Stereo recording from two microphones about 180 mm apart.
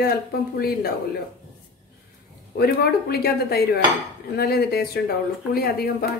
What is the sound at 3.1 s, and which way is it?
Speech, 60° left (ahead or behind).